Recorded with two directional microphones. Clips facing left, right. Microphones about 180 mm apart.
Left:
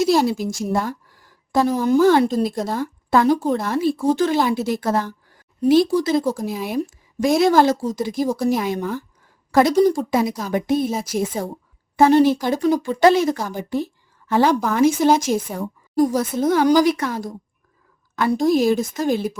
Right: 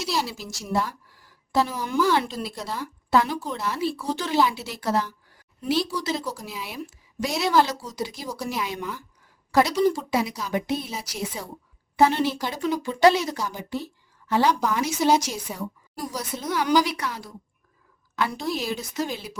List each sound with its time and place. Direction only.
0.0 s a woman's voice: 50° left (ahead or behind)